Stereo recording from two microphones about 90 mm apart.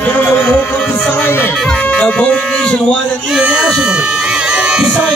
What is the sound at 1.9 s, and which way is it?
Speech, 15° left (ahead or behind).